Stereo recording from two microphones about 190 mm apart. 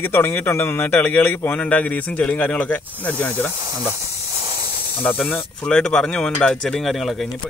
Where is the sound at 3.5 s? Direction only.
15° right (ahead or behind).